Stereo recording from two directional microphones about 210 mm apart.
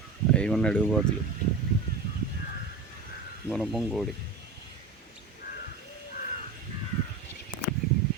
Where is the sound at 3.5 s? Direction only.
Centre (ahead or behind).